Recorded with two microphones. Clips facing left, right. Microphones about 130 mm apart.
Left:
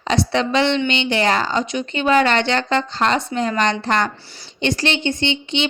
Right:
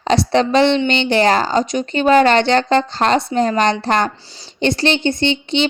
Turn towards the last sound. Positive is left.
turn(degrees=-35)  # may be behind; listen again after turning